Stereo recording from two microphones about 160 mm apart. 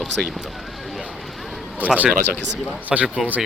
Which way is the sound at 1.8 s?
10° right (ahead or behind).